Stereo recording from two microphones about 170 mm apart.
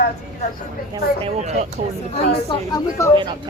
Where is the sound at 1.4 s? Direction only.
40° right (ahead or behind).